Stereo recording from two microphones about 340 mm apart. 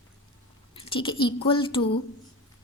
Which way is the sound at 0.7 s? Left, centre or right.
Centre.